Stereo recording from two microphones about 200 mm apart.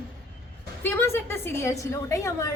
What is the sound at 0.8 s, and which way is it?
A woman's voice, 10° left (ahead or behind).